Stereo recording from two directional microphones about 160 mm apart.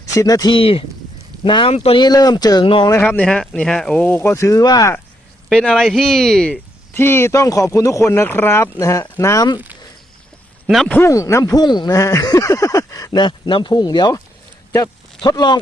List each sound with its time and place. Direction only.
0.0 s speech: 20° left (ahead or behind)
2.9 s speech: 10° left (ahead or behind)
5.5 s speech: 5° left (ahead or behind)
6.9 s speech: 15° left (ahead or behind)
10.7 s speech: centre (ahead or behind)
10.9 s speech: 20° left (ahead or behind)